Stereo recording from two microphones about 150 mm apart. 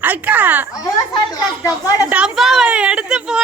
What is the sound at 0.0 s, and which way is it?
Speech, 10° right (ahead or behind).